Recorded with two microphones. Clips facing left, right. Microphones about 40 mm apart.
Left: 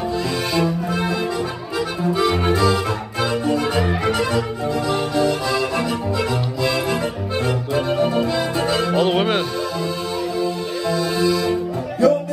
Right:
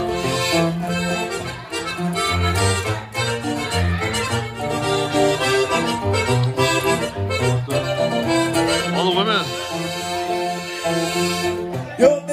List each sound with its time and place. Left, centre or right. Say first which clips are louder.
0.5 s music: even; right
2.1 s music: left 3 dB; right
4.8 s accordion: right 2 dB; right
7.4 s music: left 1 dB; right
9.1 s music: even; centre
10.3 s music: left 1 dB; right